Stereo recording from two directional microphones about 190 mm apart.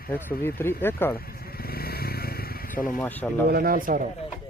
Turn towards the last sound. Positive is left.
turn(degrees=-45)  # may be behind; listen again after turning